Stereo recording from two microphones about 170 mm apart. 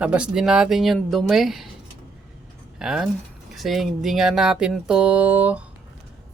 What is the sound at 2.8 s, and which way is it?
Speech, 5° right (ahead or behind).